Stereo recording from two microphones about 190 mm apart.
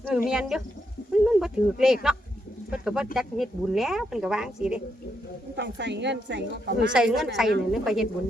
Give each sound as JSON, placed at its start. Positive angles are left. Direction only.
{"t": 0.1, "sound": "speech", "side_deg": -5}
{"t": 5.5, "sound": "a woman's voice", "side_deg": -65}
{"t": 6.9, "sound": "speech", "side_deg": -5}